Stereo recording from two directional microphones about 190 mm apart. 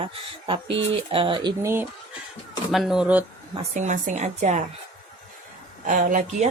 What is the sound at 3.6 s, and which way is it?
Speech, 40° right (ahead or behind).